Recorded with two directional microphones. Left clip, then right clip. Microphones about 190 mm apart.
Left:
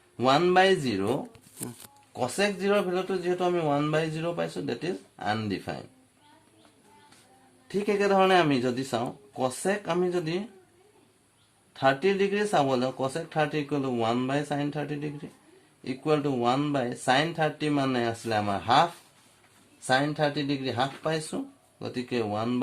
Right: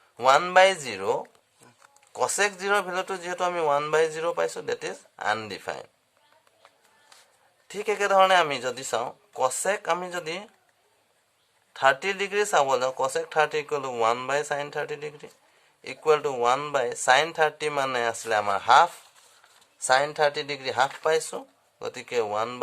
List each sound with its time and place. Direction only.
0.2 s speech: 15° right (ahead or behind)
7.7 s speech: 15° right (ahead or behind)
11.7 s speech: 20° right (ahead or behind)
19.9 s speech: 20° right (ahead or behind)